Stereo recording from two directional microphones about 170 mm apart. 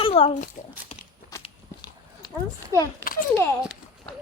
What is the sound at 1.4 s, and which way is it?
Walk, 25° left (ahead or behind).